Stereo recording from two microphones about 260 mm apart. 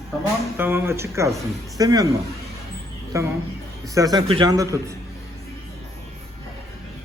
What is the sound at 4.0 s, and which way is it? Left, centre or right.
Speech, centre.